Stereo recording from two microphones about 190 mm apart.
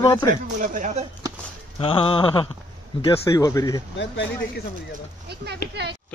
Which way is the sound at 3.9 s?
70° left (ahead or behind).